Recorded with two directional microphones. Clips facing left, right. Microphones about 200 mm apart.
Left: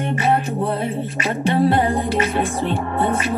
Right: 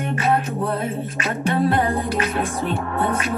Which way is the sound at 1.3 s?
25° left (ahead or behind).